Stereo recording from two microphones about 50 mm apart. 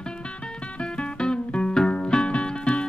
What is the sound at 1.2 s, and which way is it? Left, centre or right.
Music, centre.